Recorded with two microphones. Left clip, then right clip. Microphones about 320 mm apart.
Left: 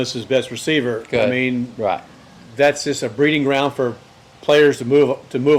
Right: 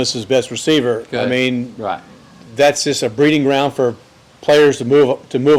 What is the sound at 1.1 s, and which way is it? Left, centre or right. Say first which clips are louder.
Speech: left 2 dB; centre.